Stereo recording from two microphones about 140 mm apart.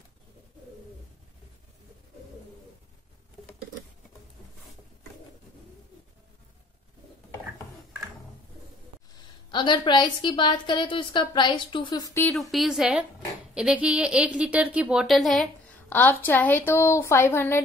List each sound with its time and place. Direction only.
9.5 s a woman's voice: 35° left (ahead or behind); by 12.4 s 20° left (ahead or behind)
12.4 s a woman's voice: centre (ahead or behind)
15.9 s a woman's voice: 15° left (ahead or behind)